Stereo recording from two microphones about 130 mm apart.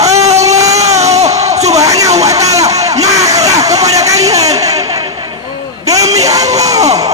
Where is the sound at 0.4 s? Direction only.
25° right (ahead or behind).